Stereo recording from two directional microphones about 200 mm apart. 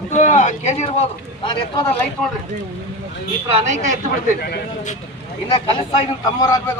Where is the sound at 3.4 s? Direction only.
35° right (ahead or behind).